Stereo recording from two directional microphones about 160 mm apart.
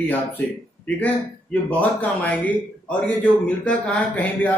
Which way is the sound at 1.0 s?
10° left (ahead or behind).